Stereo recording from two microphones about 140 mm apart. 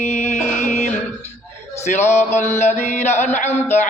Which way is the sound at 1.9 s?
55° left (ahead or behind).